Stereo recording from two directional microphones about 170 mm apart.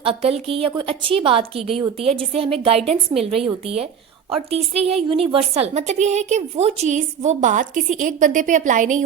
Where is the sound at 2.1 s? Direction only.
35° right (ahead or behind).